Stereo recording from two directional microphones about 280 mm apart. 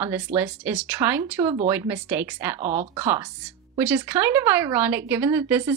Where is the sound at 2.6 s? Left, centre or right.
Right.